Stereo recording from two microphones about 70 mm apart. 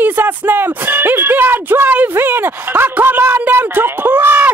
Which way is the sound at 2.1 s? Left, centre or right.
Right.